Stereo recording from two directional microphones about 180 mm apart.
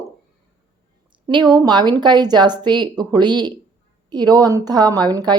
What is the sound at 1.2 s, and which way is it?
A woman's voice, 25° right (ahead or behind).